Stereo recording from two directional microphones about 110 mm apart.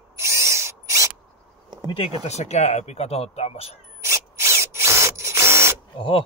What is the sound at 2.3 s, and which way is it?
Speech, 80° left.